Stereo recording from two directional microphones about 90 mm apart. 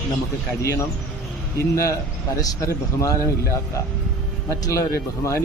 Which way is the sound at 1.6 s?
35° left (ahead or behind).